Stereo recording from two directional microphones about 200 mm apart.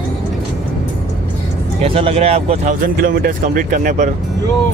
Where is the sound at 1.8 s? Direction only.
30° right (ahead or behind).